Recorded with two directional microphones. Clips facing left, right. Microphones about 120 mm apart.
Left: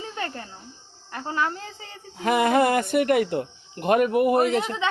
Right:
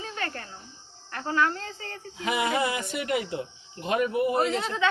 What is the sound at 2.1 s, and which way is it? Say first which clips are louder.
Speech: left 7 dB; 50° left (ahead or behind).